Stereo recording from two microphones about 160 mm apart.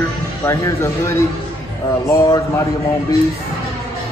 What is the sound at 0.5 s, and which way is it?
A man's voice, 20° left (ahead or behind).